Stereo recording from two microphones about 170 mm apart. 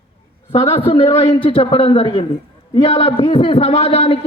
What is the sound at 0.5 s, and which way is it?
A man's voice, 35° left (ahead or behind).